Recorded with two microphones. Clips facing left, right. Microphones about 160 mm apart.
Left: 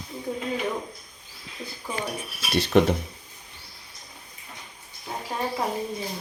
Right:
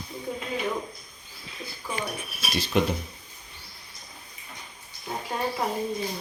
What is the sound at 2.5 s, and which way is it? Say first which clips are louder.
Speech: left 5 dB; 65° left (ahead or behind).